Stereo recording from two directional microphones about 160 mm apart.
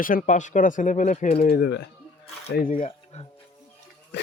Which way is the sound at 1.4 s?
80° left.